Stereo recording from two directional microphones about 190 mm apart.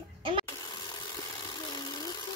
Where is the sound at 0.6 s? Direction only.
20° left (ahead or behind).